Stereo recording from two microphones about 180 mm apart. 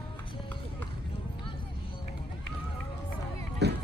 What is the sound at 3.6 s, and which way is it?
Run, 70° right (ahead or behind).